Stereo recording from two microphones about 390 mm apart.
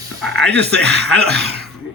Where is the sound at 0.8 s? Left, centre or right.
Right.